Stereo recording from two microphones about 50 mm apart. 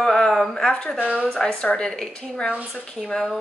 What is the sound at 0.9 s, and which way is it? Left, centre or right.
Speech, right.